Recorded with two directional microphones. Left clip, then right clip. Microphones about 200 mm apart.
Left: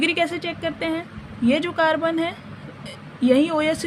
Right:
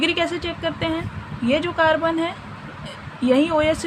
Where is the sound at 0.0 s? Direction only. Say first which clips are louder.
Even; 25° left (ahead or behind).